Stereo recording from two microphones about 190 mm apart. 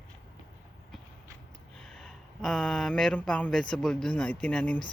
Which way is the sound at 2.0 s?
Centre (ahead or behind).